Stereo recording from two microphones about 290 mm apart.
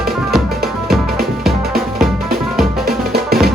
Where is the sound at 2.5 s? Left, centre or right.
Centre.